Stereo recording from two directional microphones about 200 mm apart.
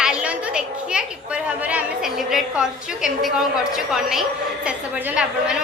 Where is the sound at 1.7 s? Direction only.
5° right (ahead or behind).